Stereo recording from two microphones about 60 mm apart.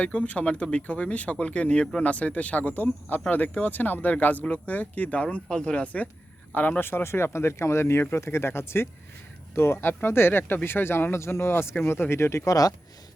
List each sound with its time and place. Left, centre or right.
0.0 s speech: left
5.5 s speech: centre; by 12.4 s left
12.5 s speech: left